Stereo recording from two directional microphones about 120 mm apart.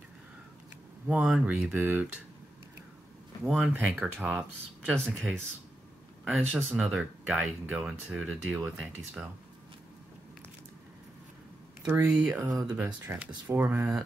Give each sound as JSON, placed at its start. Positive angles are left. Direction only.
{"t": 1.0, "sound": "speech", "side_deg": -5}
{"t": 3.4, "sound": "speech", "side_deg": -5}
{"t": 11.8, "sound": "speech", "side_deg": -20}
{"t": 12.7, "sound": "speech", "side_deg": -15}